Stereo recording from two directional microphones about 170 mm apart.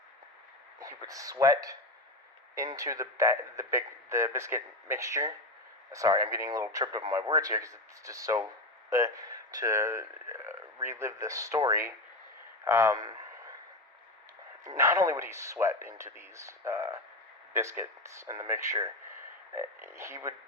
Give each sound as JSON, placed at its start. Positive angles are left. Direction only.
{"t": 0.8, "sound": "a man's voice", "side_deg": -20}
{"t": 12.6, "sound": "a sound", "side_deg": -15}
{"t": 14.6, "sound": "a man's voice", "side_deg": -15}